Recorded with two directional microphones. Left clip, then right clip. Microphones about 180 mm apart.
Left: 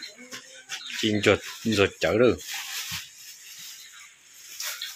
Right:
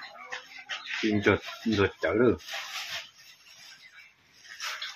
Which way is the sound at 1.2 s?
20° left (ahead or behind).